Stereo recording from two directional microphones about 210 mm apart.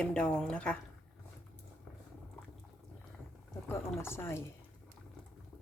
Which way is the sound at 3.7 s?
10° left (ahead or behind).